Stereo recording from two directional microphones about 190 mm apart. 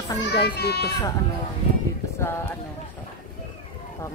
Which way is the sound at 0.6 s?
60° left (ahead or behind).